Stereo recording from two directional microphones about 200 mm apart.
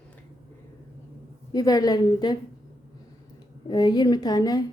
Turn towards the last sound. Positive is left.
turn(degrees=20)  # may be behind; listen again after turning